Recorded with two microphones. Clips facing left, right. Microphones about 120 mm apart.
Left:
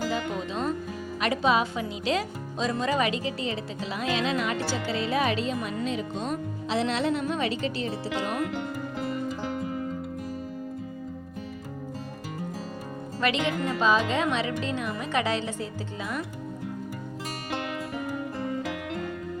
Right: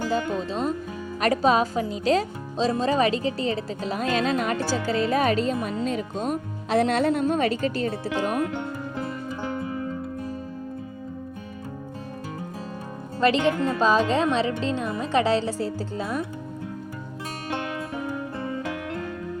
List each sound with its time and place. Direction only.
1.2 s speech: 40° right (ahead or behind)
13.1 s speech: 35° right (ahead or behind)